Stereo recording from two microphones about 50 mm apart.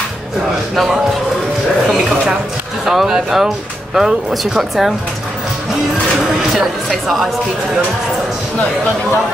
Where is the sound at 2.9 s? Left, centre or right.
Centre.